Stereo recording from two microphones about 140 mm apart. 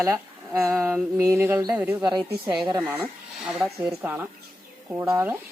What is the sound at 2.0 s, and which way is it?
Speech, 30° right (ahead or behind).